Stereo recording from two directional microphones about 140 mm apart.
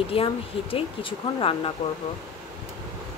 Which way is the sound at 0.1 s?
40° left (ahead or behind).